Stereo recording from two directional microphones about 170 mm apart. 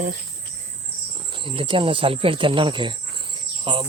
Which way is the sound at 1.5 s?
30° right (ahead or behind).